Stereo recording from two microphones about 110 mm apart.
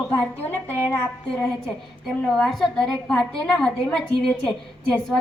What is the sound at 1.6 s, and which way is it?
A woman's voice, centre (ahead or behind).